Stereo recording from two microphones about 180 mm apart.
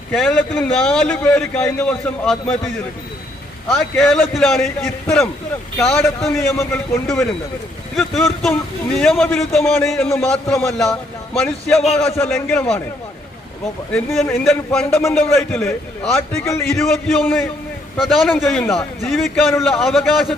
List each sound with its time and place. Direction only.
0.1 s a man's voice: 5° left (ahead or behind)
3.7 s a man's voice: centre (ahead or behind)
6.5 s a man's voice: 15° left (ahead or behind)
7.9 s a man's voice: centre (ahead or behind)
13.9 s a man's voice: centre (ahead or behind)
16.5 s a man's voice: 15° left (ahead or behind)
16.7 s a man's voice: centre (ahead or behind)